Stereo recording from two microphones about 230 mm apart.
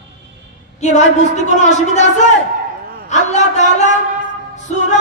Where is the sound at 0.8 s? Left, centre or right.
Left.